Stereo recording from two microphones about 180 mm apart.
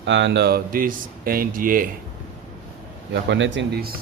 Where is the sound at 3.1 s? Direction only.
85° right; by 3.8 s 70° right (ahead or behind).